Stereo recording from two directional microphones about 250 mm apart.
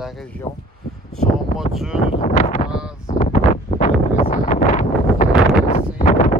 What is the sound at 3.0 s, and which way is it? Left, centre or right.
Wind noise, left.